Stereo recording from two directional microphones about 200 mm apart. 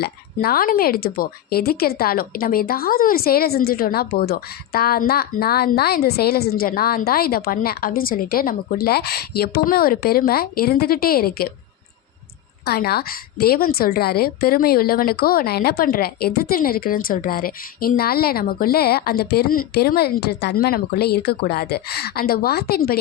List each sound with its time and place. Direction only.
0.0 s speech: 50° left (ahead or behind)
12.6 s speech: 50° left (ahead or behind)